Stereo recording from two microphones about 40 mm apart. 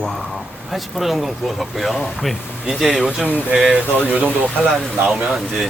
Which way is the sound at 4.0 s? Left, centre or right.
Left.